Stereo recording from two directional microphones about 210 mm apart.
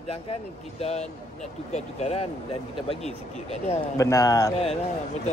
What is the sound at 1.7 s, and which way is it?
Speech, 30° left (ahead or behind).